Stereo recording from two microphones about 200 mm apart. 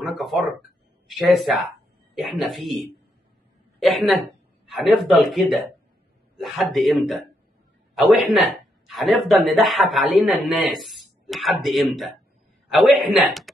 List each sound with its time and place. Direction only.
0.0 s speech: centre (ahead or behind)
13.2 s speech: centre (ahead or behind)